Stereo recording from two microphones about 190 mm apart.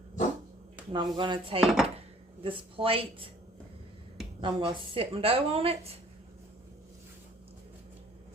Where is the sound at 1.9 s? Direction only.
25° right (ahead or behind).